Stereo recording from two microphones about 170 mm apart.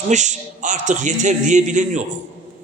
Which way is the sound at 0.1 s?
45° right (ahead or behind).